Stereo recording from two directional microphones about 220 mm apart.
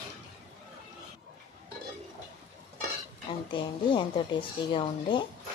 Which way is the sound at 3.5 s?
25° left (ahead or behind).